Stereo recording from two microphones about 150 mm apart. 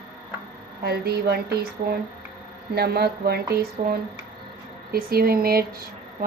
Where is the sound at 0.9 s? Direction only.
90° right.